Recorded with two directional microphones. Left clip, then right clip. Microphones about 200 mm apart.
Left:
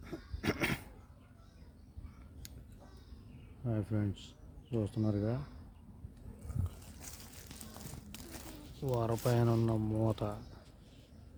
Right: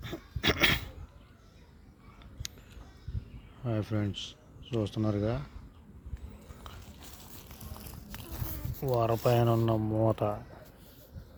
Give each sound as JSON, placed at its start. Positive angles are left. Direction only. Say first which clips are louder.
{"t": 0.0, "sound": "dog", "louder": "right 9 dB", "side_deg": 10}
{"t": 2.4, "sound": "a sound", "louder": "right 13 dB", "side_deg": 5}
{"t": 3.6, "sound": "speech", "louder": "right 5 dB", "side_deg": 5}
{"t": 9.0, "sound": "speech", "louder": "right 7 dB", "side_deg": 0}